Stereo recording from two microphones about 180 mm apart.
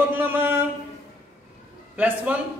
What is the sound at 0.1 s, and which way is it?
Mantra, 10° right (ahead or behind).